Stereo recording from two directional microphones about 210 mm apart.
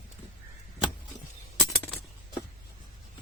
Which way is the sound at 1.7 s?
Centre (ahead or behind).